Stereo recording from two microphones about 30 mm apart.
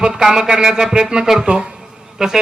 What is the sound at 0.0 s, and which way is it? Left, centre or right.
A man's voice, centre.